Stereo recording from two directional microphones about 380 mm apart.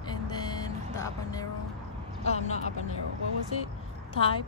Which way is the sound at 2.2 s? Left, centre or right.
Centre.